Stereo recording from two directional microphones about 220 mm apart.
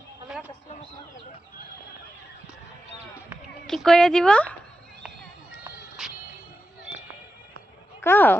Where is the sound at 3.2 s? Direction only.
Centre (ahead or behind).